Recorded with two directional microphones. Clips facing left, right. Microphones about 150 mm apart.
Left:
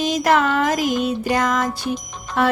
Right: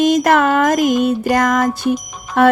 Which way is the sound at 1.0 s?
55° right (ahead or behind).